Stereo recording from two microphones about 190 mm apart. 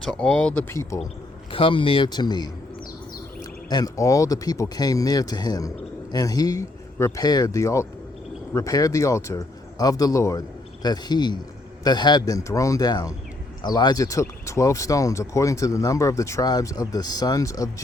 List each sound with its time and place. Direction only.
0.0 s speech: 5° left (ahead or behind)
1.5 s speech: 25° left (ahead or behind)
3.7 s speech: 20° left (ahead or behind)